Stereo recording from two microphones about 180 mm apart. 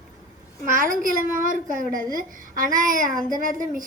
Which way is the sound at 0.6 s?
45° right (ahead or behind).